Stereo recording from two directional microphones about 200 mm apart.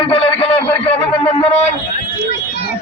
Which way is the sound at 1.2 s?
30° left (ahead or behind).